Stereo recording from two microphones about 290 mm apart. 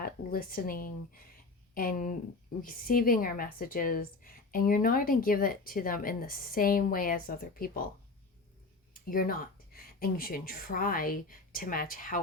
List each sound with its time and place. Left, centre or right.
0.0 s a woman's voice: left
8.9 s speech: left